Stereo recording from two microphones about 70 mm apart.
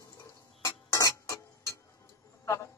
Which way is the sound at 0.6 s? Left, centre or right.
Left.